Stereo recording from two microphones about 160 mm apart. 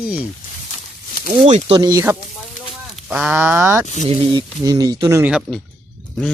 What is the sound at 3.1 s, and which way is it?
Speech, 10° right (ahead or behind).